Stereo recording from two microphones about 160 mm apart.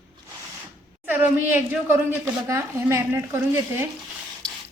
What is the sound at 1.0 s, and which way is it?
A woman's voice, 10° right (ahead or behind).